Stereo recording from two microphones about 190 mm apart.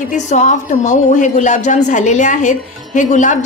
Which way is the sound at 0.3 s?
40° left (ahead or behind).